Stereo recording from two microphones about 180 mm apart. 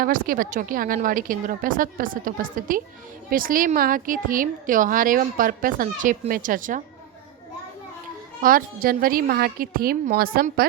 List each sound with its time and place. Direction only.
0.0 s a woman's voice: 50° right (ahead or behind)
8.4 s a woman's voice: 50° right (ahead or behind)